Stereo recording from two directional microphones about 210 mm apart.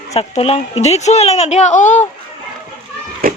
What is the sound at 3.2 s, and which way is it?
Children playing, 45° right (ahead or behind).